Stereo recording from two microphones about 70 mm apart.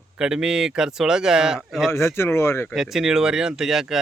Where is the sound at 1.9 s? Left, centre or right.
Left.